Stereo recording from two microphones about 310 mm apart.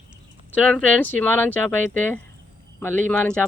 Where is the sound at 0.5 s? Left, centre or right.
Centre.